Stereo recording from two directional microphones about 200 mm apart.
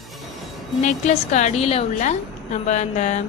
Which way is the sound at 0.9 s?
35° left (ahead or behind).